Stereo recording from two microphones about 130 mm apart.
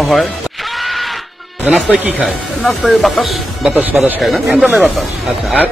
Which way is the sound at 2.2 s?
Centre (ahead or behind).